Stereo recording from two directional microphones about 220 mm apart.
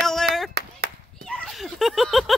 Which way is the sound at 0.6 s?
50° right (ahead or behind).